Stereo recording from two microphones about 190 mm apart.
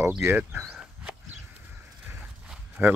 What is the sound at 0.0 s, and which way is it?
Speech, 10° right (ahead or behind).